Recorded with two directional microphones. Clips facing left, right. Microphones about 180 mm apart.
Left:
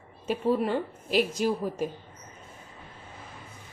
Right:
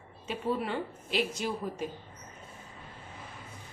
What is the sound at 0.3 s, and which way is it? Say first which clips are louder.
A woman's voice: left 6 dB; 45° left (ahead or behind).